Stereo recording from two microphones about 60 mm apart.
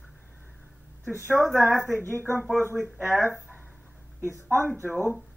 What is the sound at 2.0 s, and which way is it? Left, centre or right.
Speech, left.